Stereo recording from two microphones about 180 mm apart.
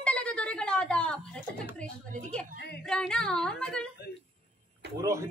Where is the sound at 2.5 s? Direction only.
65° left (ahead or behind).